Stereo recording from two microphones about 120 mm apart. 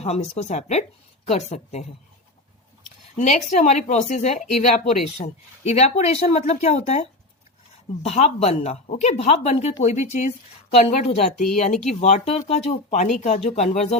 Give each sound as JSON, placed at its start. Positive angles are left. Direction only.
{"t": 0.0, "sound": "speech", "side_deg": 60}
{"t": 3.2, "sound": "speech", "side_deg": 85}
{"t": 5.2, "sound": "speech", "side_deg": 60}
{"t": 9.8, "sound": "speech", "side_deg": 75}
{"t": 10.7, "sound": "speech", "side_deg": 60}
{"t": 12.0, "sound": "speech", "side_deg": 70}
{"t": 12.5, "sound": "speech", "side_deg": 85}
{"t": 13.1, "sound": "speech", "side_deg": 70}